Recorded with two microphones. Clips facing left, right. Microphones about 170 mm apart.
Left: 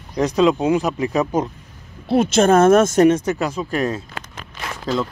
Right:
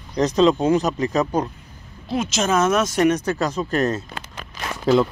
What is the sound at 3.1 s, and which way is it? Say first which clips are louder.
Speech: left 3 dB; 25° left (ahead or behind).